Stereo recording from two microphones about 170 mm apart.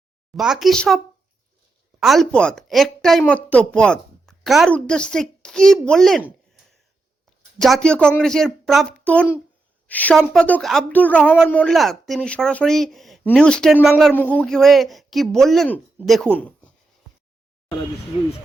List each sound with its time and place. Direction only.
0.3 s a man's voice: centre (ahead or behind)
18.1 s speech: 35° left (ahead or behind)